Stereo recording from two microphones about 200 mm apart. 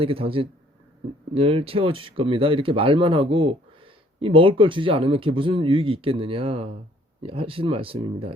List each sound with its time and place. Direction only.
0.0 s speech: 30° right (ahead or behind)